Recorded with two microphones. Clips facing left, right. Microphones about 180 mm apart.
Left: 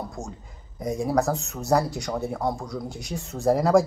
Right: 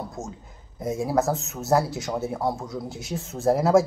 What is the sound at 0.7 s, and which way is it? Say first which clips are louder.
Speech: even; 5° right (ahead or behind).